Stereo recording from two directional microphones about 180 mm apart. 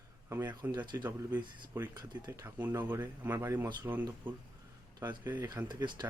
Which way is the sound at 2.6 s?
10° right (ahead or behind).